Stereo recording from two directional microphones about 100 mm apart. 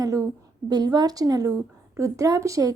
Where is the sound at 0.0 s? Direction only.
35° right (ahead or behind).